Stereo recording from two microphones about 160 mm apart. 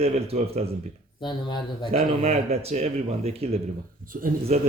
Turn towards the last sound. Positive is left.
turn(degrees=-45)  # may be behind; listen again after turning